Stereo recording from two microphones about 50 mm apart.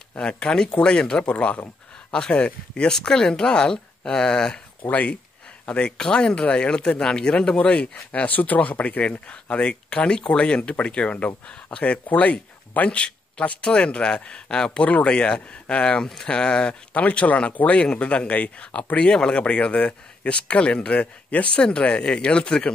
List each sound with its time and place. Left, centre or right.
0.2 s speech: centre
4.8 s speech: left
5.7 s speech: centre
9.3 s speech: left